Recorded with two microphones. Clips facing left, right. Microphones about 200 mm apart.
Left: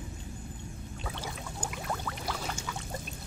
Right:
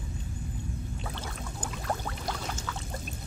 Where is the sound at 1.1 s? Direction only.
5° left (ahead or behind).